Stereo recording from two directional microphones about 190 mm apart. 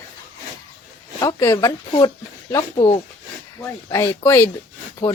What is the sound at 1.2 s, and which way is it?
Speech, 20° left (ahead or behind).